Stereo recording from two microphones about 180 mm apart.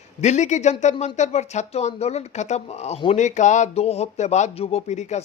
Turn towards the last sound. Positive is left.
turn(degrees=40)  # may be behind; listen again after turning